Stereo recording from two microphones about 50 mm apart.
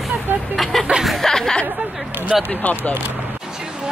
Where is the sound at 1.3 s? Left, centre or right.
Centre.